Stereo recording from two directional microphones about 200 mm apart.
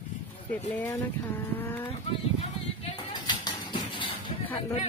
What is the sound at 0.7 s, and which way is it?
Speech, 10° left (ahead or behind).